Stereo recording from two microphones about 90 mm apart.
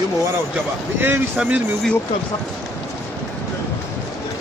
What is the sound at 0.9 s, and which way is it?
Speech, 25° right (ahead or behind).